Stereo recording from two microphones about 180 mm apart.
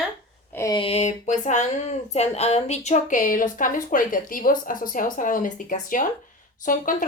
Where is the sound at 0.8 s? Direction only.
35° left (ahead or behind).